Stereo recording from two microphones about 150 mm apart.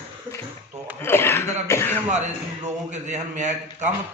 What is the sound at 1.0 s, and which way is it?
Speech, 15° left (ahead or behind).